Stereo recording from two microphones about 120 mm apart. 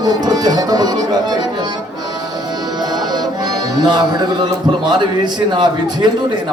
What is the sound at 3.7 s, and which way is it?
A man's voice, 35° right (ahead or behind).